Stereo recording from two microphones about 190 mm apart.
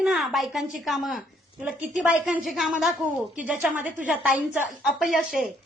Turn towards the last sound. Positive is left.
turn(degrees=-5)  # may be behind; listen again after turning